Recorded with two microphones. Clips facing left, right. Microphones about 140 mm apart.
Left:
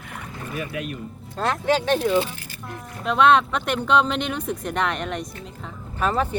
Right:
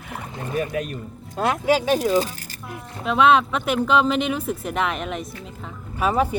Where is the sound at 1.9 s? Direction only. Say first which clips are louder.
Right 1 dB; 40° right (ahead or behind).